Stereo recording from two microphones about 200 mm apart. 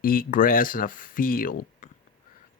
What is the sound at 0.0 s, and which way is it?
Speech, 45° left (ahead or behind).